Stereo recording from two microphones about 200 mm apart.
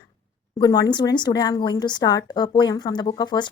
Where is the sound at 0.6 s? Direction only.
20° left (ahead or behind).